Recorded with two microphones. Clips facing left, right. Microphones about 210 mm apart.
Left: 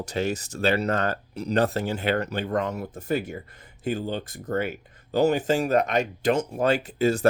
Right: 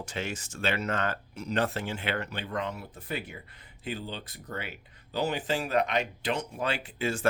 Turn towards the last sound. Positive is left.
turn(degrees=40)  # may be behind; listen again after turning